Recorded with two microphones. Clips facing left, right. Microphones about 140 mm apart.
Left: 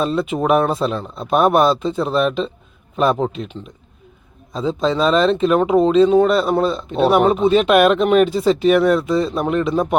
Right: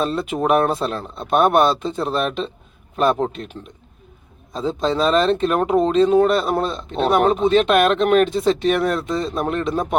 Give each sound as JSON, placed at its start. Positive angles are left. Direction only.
{"t": 0.0, "sound": "speech", "side_deg": 0}